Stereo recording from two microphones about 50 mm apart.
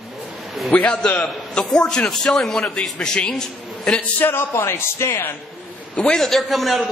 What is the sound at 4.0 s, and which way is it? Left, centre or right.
Speech, left.